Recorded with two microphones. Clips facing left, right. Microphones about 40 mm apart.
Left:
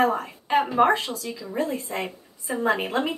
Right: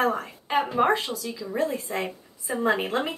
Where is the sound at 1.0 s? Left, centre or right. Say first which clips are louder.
Even; left.